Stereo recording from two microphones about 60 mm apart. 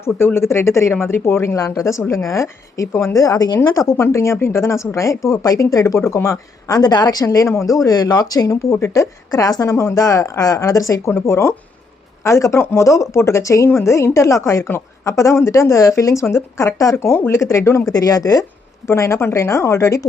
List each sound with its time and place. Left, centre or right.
0.3 s a woman's voice: left
3.8 s a woman's voice: left
6.2 s a woman's voice: left
11.1 s a woman's voice: left
12.2 s a woman's voice: left
17.2 s a woman's voice: left
17.9 s speech: left
18.9 s a woman's voice: left